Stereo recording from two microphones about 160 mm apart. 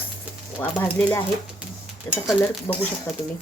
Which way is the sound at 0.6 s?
10° left (ahead or behind).